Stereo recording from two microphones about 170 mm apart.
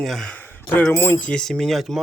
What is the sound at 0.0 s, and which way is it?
A man's voice, centre (ahead or behind).